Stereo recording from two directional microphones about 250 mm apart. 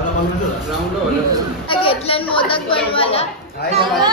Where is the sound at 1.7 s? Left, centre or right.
Left.